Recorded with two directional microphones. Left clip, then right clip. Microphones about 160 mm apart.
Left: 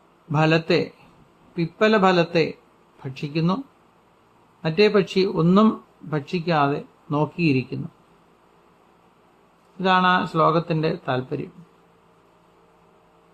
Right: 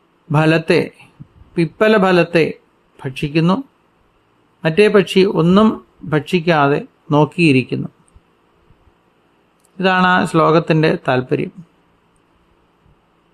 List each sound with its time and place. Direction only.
0.3 s speech: 35° right (ahead or behind)
4.6 s speech: 35° right (ahead or behind)
5.5 s speech: 25° right (ahead or behind)
6.1 s speech: 40° right (ahead or behind)
9.7 s speech: 35° right (ahead or behind)